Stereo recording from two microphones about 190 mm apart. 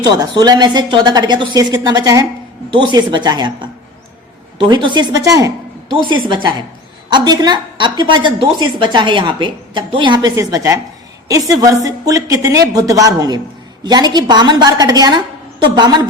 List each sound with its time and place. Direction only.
0.0 s a woman's voice: 20° right (ahead or behind)